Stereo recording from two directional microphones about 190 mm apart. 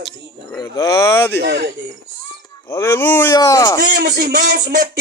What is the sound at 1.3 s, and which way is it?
Speech, 60° right (ahead or behind).